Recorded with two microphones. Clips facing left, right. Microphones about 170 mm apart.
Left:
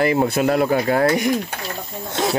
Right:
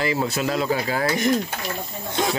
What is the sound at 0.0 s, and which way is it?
Speech, 55° left (ahead or behind).